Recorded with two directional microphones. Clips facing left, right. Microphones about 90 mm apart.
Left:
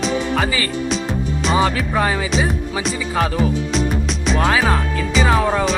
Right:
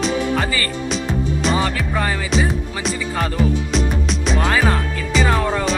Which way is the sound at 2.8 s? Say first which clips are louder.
Left 2 dB; centre (ahead or behind).